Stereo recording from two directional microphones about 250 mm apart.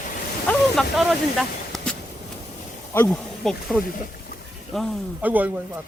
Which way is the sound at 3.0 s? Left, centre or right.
Centre.